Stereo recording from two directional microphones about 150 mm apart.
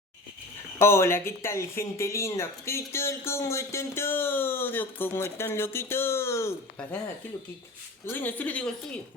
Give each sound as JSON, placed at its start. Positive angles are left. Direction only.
{"t": 0.8, "sound": "speech", "side_deg": 15}
{"t": 8.0, "sound": "speech", "side_deg": 15}